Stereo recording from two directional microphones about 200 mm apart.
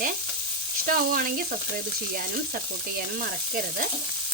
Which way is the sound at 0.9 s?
45° right (ahead or behind).